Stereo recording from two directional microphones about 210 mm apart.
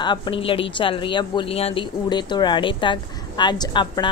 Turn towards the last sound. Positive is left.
turn(degrees=20)  # may be behind; listen again after turning